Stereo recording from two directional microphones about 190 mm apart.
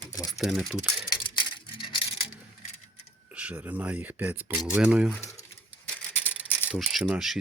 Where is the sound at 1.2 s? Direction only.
25° left (ahead or behind).